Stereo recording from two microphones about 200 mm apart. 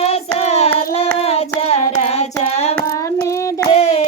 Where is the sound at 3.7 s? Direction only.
30° left (ahead or behind).